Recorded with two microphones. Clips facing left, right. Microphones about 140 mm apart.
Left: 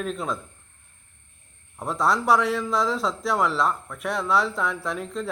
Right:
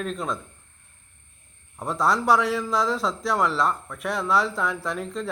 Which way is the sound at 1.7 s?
Centre (ahead or behind).